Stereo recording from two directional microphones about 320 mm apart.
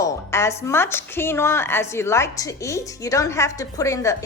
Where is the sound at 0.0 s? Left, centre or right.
Centre.